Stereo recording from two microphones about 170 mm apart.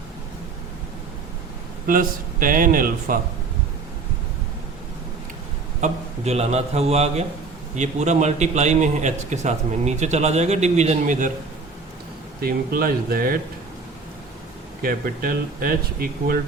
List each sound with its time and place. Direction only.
1.9 s speech: 55° right (ahead or behind)
5.8 s a man's voice: 40° right (ahead or behind)
12.4 s speech: 60° right (ahead or behind)
14.8 s speech: 55° right (ahead or behind)